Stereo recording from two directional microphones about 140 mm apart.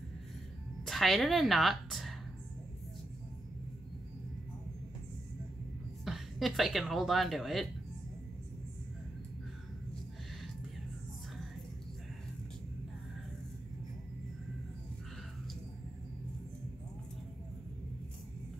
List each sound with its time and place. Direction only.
0.8 s a woman's voice: centre (ahead or behind)
6.0 s speech: centre (ahead or behind)